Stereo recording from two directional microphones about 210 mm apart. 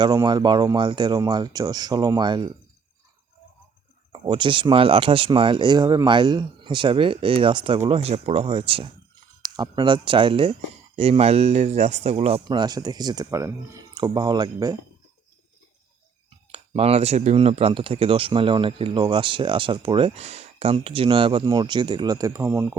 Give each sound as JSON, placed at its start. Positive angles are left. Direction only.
{"t": 0.0, "sound": "speech", "side_deg": -20}
{"t": 4.1, "sound": "speech", "side_deg": -20}
{"t": 16.5, "sound": "speech", "side_deg": -30}